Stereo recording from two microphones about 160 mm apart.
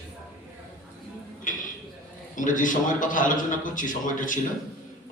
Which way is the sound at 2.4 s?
55° left (ahead or behind).